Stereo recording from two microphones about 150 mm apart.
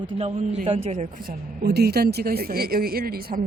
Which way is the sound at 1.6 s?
90° right.